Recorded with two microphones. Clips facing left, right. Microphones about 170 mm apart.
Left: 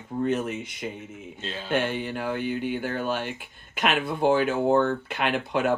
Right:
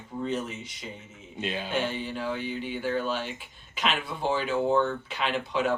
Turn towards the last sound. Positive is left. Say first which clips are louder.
# left 3 dB
turn(degrees=55)  # may be behind; listen again after turning